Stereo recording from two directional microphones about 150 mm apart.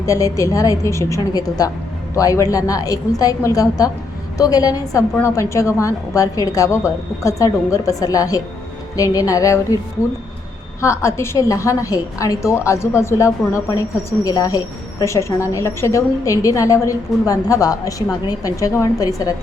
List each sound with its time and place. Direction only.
0.0 s a woman's voice: 20° left (ahead or behind)
10.8 s a woman's voice: 20° left (ahead or behind)